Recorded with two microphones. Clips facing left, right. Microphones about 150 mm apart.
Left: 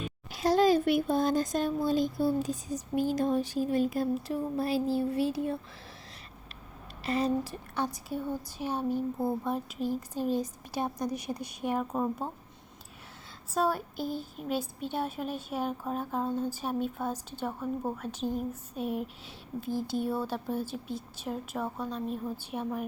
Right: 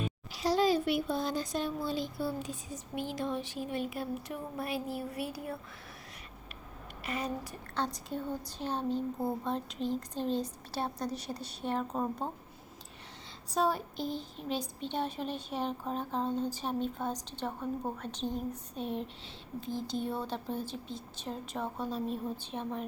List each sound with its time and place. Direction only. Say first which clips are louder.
0.3 s speech: left 4 dB; 50° left (ahead or behind); by 5.5 s 25° left (ahead or behind)
7.0 s speech: left 8 dB; 35° left (ahead or behind)
7.9 s speech: left 3 dB; 10° left (ahead or behind)
13.5 s speech: left 1 dB; centre (ahead or behind)